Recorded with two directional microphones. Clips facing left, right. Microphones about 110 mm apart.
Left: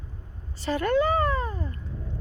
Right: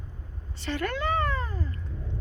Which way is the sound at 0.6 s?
35° left (ahead or behind).